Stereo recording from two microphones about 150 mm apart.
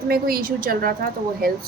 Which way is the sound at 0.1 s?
75° right (ahead or behind).